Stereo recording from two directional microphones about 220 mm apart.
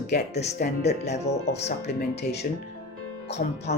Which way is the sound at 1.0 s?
30° left (ahead or behind).